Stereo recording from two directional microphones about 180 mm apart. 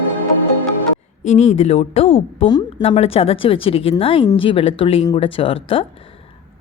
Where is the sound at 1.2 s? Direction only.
40° left (ahead or behind).